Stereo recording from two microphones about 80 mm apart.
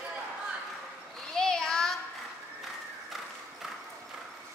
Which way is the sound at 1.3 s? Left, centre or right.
Centre.